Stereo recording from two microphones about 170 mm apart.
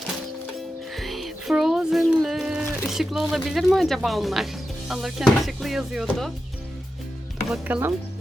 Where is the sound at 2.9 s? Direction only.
Centre (ahead or behind).